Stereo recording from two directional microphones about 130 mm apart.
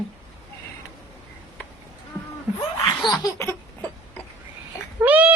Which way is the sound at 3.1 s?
30° left (ahead or behind).